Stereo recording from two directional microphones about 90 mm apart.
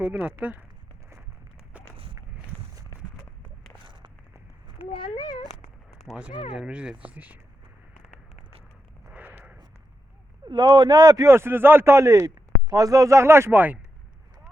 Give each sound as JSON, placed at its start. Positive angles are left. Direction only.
{"t": 0.0, "sound": "speech", "side_deg": -20}
{"t": 3.8, "sound": "a sound", "side_deg": -65}
{"t": 4.9, "sound": "speech", "side_deg": 60}
{"t": 6.5, "sound": "speech", "side_deg": -10}
{"t": 9.1, "sound": "a sound", "side_deg": -20}
{"t": 10.4, "sound": "a man's voice", "side_deg": -60}
{"t": 11.3, "sound": "speech", "side_deg": -30}